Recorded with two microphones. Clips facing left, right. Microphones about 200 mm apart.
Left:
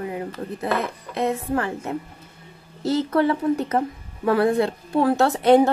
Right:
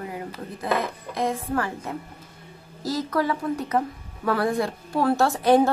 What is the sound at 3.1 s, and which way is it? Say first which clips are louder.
A woman's voice: left 4 dB; 30° left (ahead or behind).